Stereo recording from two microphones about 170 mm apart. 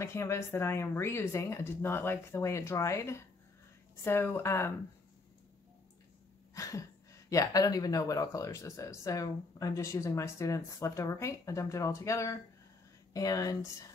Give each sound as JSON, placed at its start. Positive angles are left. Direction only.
{"t": 0.0, "sound": "speech", "side_deg": 15}
{"t": 6.5, "sound": "speech", "side_deg": 20}